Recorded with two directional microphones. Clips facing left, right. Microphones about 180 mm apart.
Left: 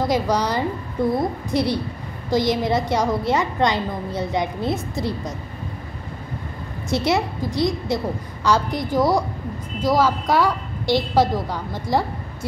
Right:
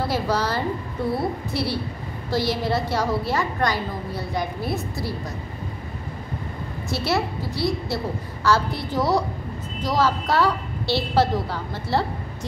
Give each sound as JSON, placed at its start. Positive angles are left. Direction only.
{"t": 0.0, "sound": "a woman's voice", "side_deg": 15}
{"t": 6.9, "sound": "a woman's voice", "side_deg": 20}